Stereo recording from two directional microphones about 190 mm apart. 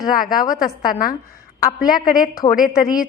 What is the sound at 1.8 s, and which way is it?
Speech, 45° left (ahead or behind).